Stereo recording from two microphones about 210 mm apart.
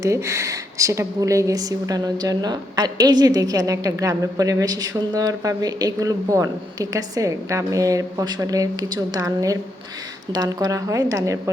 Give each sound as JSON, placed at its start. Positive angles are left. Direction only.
{"t": 0.0, "sound": "speech", "side_deg": -15}